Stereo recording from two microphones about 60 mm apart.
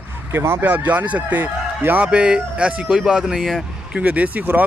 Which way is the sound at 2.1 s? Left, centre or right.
Centre.